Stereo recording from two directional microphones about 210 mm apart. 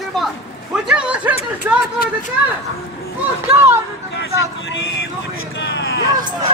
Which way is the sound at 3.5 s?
10° right (ahead or behind).